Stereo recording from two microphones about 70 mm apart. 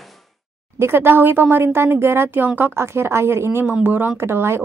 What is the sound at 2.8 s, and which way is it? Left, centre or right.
Speech, right.